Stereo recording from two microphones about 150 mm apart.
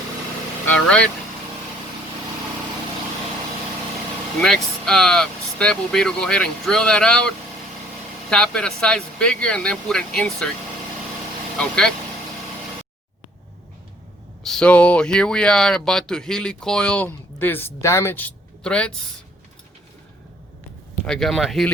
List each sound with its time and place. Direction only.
0.9 s speech: 5° left (ahead or behind)
4.4 s speech: 5° left (ahead or behind)
11.5 s speech: 5° left (ahead or behind)
14.4 s speech: 5° left (ahead or behind)
21.0 s speech: 5° left (ahead or behind)